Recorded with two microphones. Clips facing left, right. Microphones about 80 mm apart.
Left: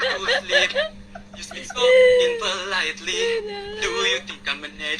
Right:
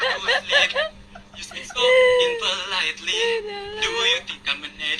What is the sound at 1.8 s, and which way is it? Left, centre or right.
A woman's voice, left.